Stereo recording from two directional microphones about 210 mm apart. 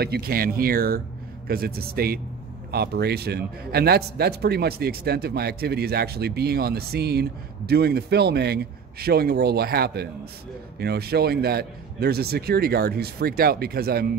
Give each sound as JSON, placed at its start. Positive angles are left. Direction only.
{"t": 0.0, "sound": "a man's voice", "side_deg": -45}